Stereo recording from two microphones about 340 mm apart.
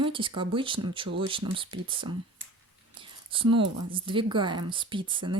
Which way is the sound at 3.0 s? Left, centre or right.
Centre.